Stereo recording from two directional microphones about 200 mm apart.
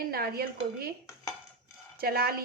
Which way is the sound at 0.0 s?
50° right (ahead or behind).